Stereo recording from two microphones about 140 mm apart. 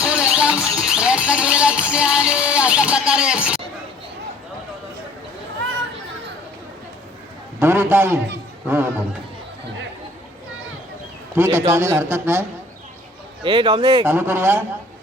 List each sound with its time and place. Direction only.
0.0 s music: 10° right (ahead or behind)
7.6 s speech: 15° right (ahead or behind)
11.3 s speech: 15° right (ahead or behind)
13.4 s speech: 35° right (ahead or behind)
14.0 s speech: 15° right (ahead or behind)